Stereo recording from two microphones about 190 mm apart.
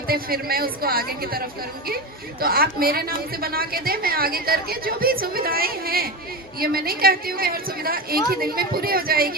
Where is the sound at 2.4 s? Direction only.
50° right (ahead or behind).